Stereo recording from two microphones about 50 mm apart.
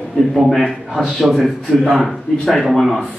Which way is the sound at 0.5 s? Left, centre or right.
Centre.